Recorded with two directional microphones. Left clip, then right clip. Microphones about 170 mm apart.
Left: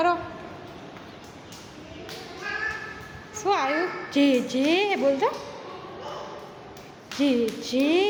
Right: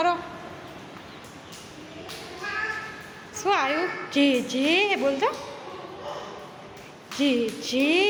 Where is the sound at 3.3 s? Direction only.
5° left (ahead or behind).